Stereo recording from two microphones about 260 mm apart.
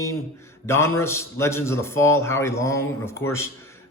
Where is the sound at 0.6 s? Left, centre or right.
Centre.